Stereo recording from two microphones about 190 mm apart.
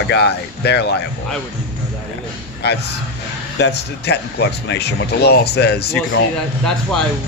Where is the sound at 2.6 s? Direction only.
60° left (ahead or behind).